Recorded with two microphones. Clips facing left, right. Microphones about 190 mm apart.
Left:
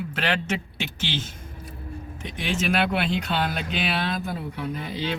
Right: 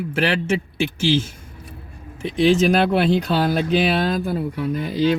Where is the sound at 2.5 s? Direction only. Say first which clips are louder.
Right 7 dB; 35° right (ahead or behind).